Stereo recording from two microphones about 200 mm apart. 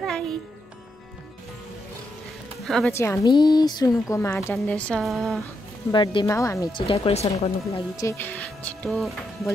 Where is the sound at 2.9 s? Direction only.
15° left (ahead or behind).